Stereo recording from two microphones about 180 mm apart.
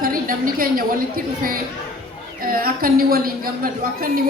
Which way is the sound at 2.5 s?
55° right (ahead or behind).